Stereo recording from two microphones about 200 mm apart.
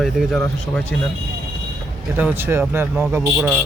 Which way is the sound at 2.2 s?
10° right (ahead or behind).